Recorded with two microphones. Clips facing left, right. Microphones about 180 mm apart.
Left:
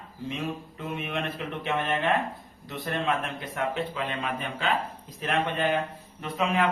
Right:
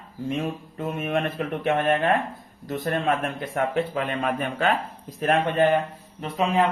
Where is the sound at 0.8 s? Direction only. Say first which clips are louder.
Right 7 dB; 45° right (ahead or behind).